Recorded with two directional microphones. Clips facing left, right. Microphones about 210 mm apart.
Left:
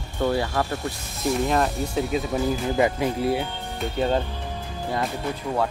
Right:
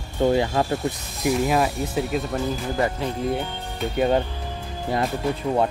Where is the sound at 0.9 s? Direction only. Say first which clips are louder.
Right 2 dB; 10° right (ahead or behind).